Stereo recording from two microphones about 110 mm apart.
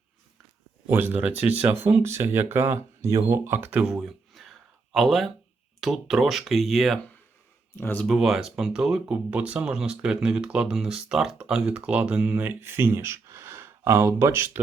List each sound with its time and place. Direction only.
0.9 s speech: 15° right (ahead or behind); by 7.0 s centre (ahead or behind)
7.8 s speech: 20° left (ahead or behind)
8.0 s speech: centre (ahead or behind); by 14.6 s 20° right (ahead or behind)